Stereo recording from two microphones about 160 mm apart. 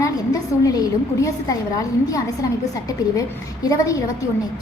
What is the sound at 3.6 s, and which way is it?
Speech, 20° left (ahead or behind).